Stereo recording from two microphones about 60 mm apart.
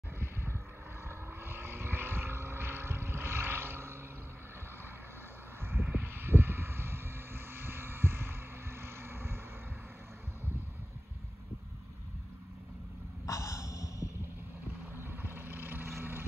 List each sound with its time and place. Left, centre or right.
1.0 s vehicle: right
5.7 s vehicle: right
13.3 s snort: left
15.0 s vehicle: right